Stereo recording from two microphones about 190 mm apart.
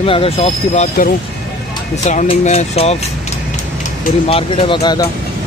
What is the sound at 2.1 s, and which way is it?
Speech, 35° left (ahead or behind).